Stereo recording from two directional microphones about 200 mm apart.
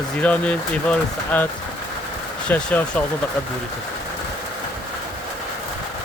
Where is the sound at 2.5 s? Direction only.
5° left (ahead or behind).